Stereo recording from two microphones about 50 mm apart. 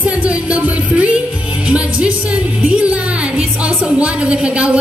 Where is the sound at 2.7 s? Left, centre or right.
Right.